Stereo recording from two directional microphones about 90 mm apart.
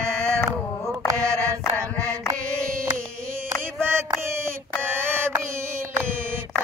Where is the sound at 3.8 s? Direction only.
25° right (ahead or behind).